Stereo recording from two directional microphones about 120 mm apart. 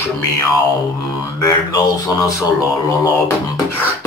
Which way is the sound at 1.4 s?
25° left (ahead or behind).